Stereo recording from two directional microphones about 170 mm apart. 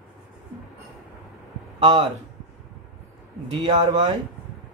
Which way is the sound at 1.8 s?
25° right (ahead or behind).